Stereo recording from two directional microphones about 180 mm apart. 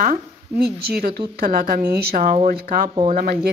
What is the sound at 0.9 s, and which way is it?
Speech, 60° right (ahead or behind).